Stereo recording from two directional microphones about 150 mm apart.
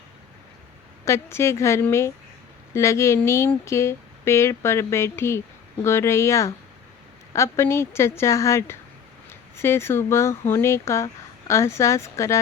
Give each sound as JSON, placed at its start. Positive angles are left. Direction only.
{"t": 1.0, "sound": "a woman's voice", "side_deg": 20}